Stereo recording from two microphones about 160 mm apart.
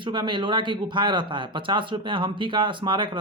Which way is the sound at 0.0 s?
30° right (ahead or behind).